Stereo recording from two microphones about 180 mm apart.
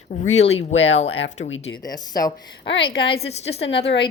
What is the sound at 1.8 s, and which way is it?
A woman's voice, 20° left (ahead or behind).